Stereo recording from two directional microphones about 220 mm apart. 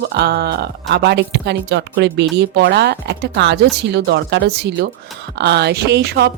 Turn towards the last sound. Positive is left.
turn(degrees=-45)  # may be behind; listen again after turning